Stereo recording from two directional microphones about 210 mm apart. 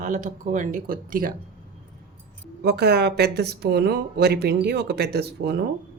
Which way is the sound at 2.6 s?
50° right (ahead or behind).